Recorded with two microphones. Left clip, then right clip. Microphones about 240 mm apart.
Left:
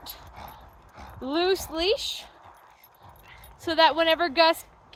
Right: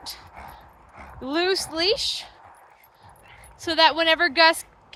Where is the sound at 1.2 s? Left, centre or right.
Centre.